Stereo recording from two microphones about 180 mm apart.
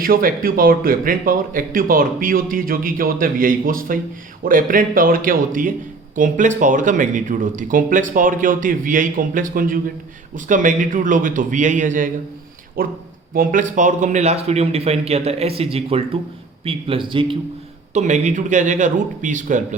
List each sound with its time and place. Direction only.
0.0 s a man's voice: 50° right (ahead or behind); by 17.3 s 30° right (ahead or behind)
17.9 s a man's voice: 40° right (ahead or behind)